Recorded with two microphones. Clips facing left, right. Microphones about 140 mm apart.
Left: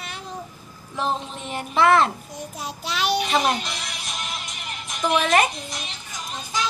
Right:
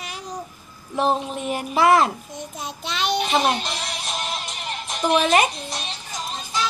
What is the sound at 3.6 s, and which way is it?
Music, 30° right (ahead or behind).